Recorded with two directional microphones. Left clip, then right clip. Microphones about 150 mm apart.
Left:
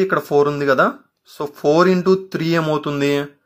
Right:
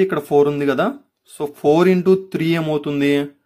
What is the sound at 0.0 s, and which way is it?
Speech, 20° right (ahead or behind).